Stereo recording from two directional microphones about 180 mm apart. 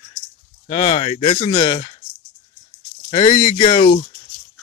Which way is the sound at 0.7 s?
35° left (ahead or behind).